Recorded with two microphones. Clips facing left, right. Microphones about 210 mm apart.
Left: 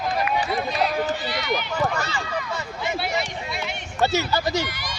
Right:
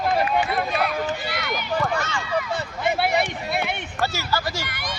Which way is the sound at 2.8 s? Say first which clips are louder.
Right 5 dB; 55° right (ahead or behind).